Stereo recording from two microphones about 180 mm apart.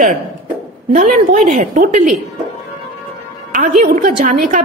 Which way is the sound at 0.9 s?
45° right (ahead or behind).